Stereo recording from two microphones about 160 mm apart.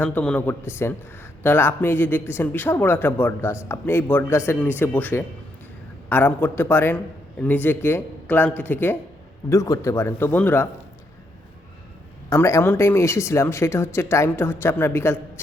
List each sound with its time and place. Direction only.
0.0 s speech: 10° left (ahead or behind)
12.3 s speech: 20° left (ahead or behind)